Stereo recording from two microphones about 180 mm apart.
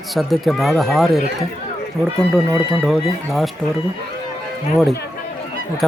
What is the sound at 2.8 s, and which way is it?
Speech, centre (ahead or behind).